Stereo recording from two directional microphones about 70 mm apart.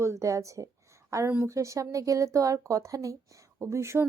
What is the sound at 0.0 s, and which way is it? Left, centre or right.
Speech, right.